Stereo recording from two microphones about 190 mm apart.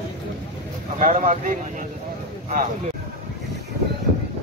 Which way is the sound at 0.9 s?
45° right (ahead or behind).